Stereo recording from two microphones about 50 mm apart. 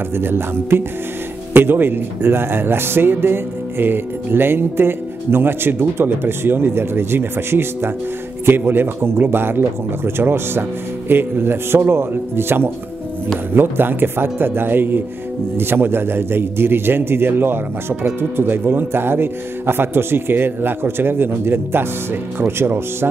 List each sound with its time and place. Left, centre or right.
0.2 s speech: right